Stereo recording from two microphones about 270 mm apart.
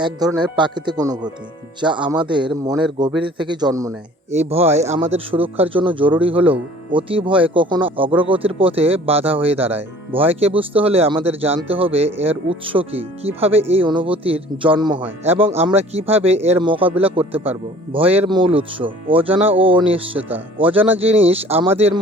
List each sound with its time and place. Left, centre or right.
0.0 s speech: centre
4.3 s speech: right